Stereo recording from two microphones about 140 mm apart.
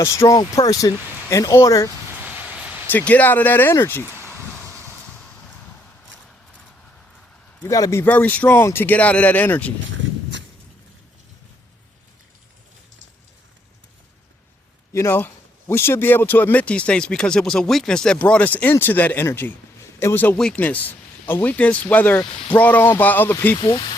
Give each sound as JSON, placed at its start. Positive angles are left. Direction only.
{"t": 0.0, "sound": "speech", "side_deg": 20}
{"t": 2.2, "sound": "vehicle", "side_deg": -10}
{"t": 2.8, "sound": "a man's voice", "side_deg": 10}
{"t": 4.0, "sound": "a sound", "side_deg": -15}
{"t": 7.7, "sound": "a man's voice", "side_deg": 20}
{"t": 14.9, "sound": "a man's voice", "side_deg": 15}
{"t": 23.6, "sound": "speech", "side_deg": 35}